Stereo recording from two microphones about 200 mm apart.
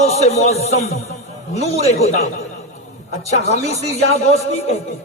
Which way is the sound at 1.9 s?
35° left (ahead or behind).